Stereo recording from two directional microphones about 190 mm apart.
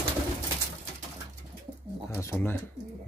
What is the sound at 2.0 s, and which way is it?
Speech, 15° left (ahead or behind).